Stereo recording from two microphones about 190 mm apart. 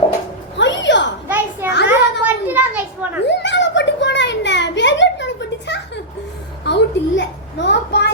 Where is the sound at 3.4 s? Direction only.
70° left (ahead or behind).